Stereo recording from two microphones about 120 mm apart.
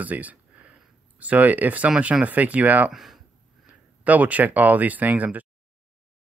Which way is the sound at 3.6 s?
10° right (ahead or behind).